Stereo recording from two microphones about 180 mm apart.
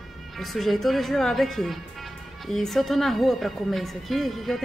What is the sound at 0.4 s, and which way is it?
Speech, centre (ahead or behind).